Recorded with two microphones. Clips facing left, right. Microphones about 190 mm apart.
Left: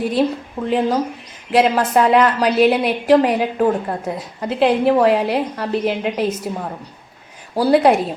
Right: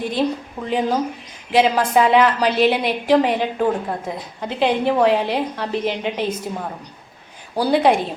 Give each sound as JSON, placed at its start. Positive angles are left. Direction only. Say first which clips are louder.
{"t": 0.2, "sound": "a woman's voice", "louder": "left 3 dB", "side_deg": 0}